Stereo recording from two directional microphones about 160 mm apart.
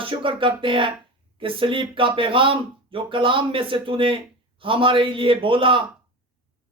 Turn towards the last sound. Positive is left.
turn(degrees=-35)  # may be behind; listen again after turning